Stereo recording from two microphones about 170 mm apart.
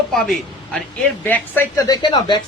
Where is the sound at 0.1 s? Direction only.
Centre (ahead or behind).